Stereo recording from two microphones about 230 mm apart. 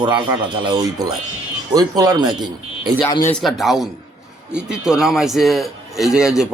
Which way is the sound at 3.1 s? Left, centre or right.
Centre.